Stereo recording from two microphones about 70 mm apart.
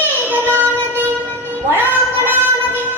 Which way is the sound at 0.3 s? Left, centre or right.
Right.